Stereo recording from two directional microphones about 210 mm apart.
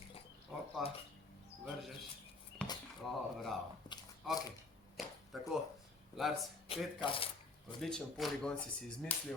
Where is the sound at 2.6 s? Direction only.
5° left (ahead or behind).